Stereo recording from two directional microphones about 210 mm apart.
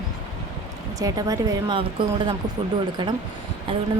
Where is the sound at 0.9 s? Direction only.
15° right (ahead or behind).